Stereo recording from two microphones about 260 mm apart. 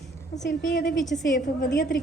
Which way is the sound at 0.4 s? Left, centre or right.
Left.